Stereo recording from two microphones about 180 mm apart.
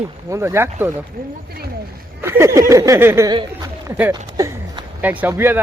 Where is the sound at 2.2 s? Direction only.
15° right (ahead or behind).